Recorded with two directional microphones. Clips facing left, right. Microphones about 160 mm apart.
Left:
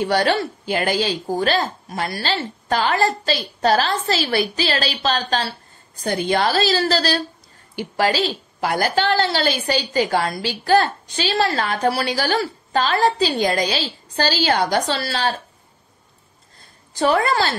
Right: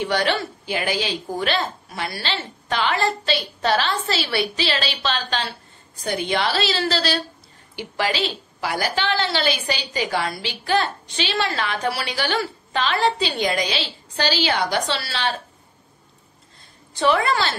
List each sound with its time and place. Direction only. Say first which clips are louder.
0.0 s a woman's voice: left 3 dB; 40° left (ahead or behind)
17.0 s a woman's voice: left 2 dB; 40° left (ahead or behind)